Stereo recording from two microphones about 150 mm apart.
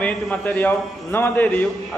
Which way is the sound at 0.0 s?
10° left (ahead or behind).